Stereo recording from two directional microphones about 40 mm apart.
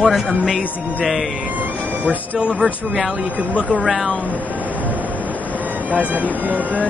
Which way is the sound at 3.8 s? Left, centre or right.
Centre.